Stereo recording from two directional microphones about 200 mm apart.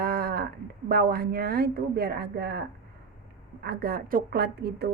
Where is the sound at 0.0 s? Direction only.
50° right (ahead or behind).